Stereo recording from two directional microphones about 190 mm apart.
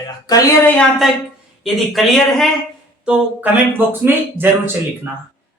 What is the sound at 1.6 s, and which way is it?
Speech, centre (ahead or behind).